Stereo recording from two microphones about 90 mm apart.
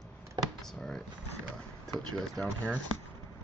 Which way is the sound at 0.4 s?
55° right (ahead or behind).